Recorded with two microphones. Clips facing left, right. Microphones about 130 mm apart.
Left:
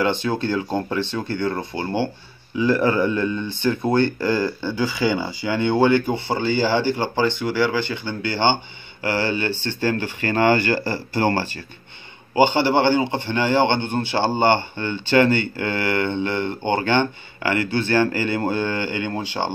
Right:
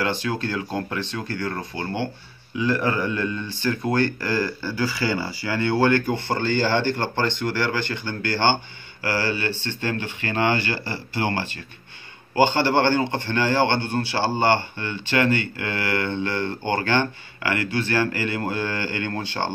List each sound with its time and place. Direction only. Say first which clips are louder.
0.0 s a man's voice: left 4 dB; 25° left (ahead or behind)
9.8 s speech: left 5 dB; 40° left (ahead or behind)
12.4 s a man's voice: left 2 dB; 15° left (ahead or behind)